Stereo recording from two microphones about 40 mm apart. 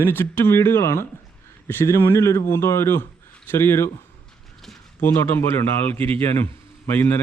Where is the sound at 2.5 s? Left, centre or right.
Left.